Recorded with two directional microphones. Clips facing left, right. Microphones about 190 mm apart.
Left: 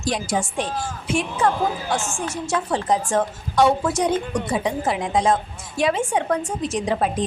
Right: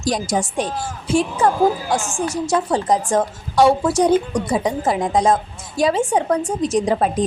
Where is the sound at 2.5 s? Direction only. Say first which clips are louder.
Right 2 dB; 40° right (ahead or behind).